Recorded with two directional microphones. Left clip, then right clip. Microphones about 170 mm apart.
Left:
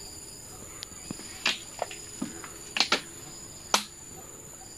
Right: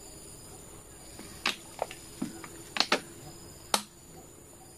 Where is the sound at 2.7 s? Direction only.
20° right (ahead or behind).